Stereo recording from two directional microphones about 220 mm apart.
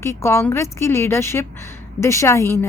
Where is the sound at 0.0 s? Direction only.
10° left (ahead or behind).